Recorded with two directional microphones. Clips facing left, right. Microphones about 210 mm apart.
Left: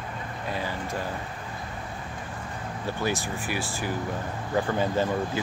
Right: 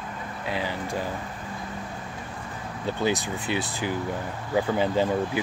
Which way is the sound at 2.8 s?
20° right (ahead or behind).